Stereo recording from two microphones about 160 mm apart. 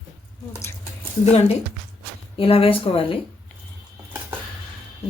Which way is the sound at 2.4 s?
35° left (ahead or behind).